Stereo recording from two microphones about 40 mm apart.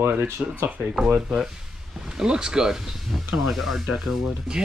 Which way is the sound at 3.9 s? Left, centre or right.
Centre.